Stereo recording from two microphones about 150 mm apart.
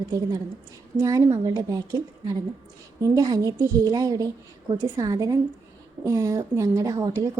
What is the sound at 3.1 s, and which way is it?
A woman's voice, 25° right (ahead or behind).